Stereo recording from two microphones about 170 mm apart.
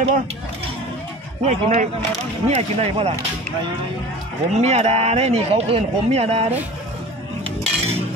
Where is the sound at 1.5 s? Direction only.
40° right (ahead or behind).